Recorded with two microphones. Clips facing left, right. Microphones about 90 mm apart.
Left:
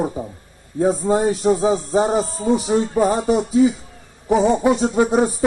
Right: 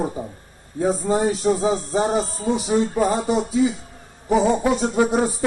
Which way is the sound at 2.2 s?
40° left (ahead or behind).